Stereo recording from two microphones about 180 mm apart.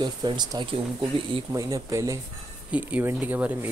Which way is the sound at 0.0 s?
25° right (ahead or behind).